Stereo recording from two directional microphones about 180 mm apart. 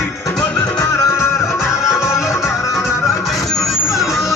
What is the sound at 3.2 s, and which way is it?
Music, centre (ahead or behind).